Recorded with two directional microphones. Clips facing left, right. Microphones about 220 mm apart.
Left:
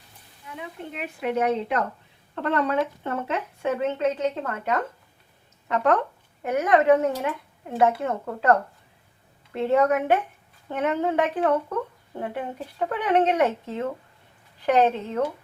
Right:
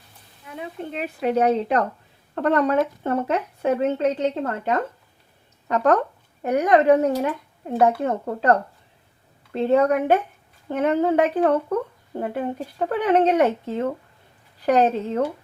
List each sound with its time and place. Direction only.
0.5 s speech: 35° right (ahead or behind)